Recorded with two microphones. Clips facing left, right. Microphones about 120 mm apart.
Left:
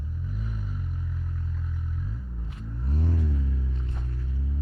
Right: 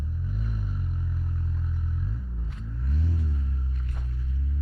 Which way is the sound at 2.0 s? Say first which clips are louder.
Right 1 dB; centre (ahead or behind).